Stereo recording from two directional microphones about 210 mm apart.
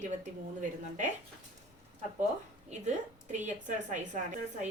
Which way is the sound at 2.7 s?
35° right (ahead or behind).